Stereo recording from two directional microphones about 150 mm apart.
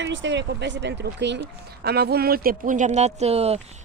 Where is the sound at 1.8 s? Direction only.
90° right.